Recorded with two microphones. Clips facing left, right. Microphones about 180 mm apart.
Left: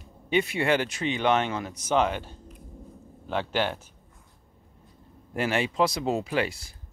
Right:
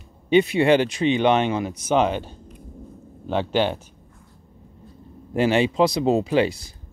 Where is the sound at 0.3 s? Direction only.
20° right (ahead or behind).